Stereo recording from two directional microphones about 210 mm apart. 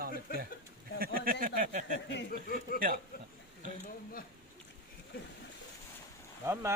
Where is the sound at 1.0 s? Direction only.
45° right (ahead or behind).